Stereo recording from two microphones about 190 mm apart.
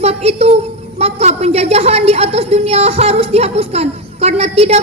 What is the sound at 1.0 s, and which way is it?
A woman's voice, 35° right (ahead or behind).